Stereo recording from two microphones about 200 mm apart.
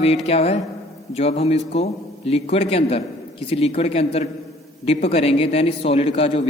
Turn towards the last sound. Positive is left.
turn(degrees=30)  # may be behind; listen again after turning